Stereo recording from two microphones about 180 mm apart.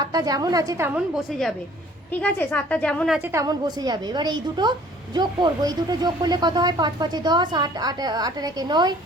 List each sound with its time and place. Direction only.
0.0 s speech: 20° right (ahead or behind)
0.9 s a woman's voice: centre (ahead or behind)
3.2 s speech: 15° right (ahead or behind)